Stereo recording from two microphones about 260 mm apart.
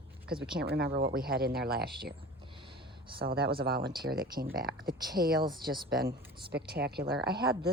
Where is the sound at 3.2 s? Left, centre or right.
Right.